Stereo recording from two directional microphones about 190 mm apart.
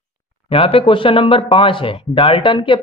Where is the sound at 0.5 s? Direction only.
30° left (ahead or behind).